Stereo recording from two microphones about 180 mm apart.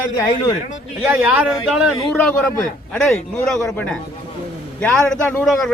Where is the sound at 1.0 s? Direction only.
10° right (ahead or behind).